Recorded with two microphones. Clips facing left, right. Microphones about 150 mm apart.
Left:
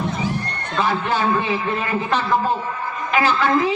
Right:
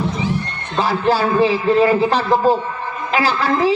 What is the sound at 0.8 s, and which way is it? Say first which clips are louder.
A man's voice: right 4 dB; 35° right (ahead or behind).